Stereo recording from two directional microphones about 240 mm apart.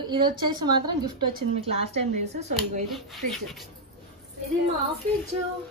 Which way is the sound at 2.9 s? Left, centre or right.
Centre.